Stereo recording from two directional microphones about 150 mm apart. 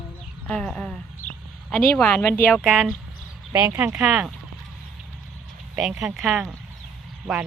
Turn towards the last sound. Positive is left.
turn(degrees=0)  # may be behind; listen again after turning